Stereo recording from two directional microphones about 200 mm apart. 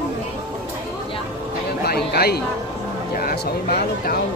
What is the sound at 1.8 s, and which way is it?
Speech, 50° left (ahead or behind).